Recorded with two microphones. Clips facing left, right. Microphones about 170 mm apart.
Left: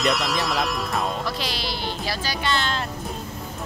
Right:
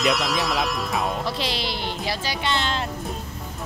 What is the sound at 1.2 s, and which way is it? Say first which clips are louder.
Speech: right 2 dB; 25° right (ahead or behind).